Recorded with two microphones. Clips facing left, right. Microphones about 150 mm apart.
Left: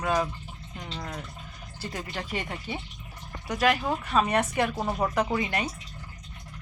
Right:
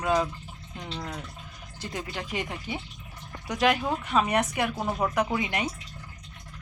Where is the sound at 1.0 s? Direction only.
5° right (ahead or behind).